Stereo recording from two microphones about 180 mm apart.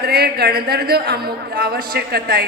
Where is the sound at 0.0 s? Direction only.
60° right (ahead or behind).